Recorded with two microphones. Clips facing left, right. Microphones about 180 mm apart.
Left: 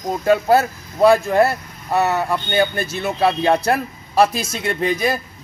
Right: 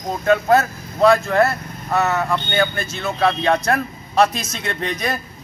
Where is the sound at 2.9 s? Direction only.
10° left (ahead or behind).